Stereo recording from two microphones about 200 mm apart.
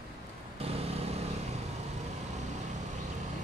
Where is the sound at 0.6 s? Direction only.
30° right (ahead or behind).